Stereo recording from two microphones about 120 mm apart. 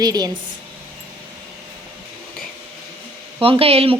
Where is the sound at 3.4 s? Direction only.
50° right (ahead or behind).